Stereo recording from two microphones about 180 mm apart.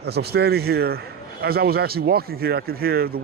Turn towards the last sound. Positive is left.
turn(degrees=-60)  # may be behind; listen again after turning